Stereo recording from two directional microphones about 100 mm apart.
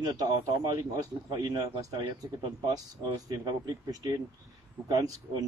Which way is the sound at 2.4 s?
40° right (ahead or behind).